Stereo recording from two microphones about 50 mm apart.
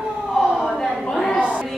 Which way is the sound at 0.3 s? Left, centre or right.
Centre.